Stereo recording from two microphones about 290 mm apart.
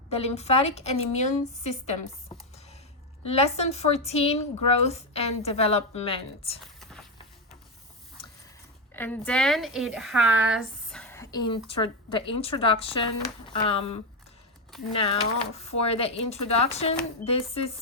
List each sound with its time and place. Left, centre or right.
0.1 s a woman's voice: left
3.2 s a woman's voice: left
6.6 s a sound: centre
8.2 s mechanisms: centre
8.9 s a woman's voice: centre